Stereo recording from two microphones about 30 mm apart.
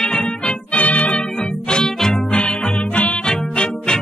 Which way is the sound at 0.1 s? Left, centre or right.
Left.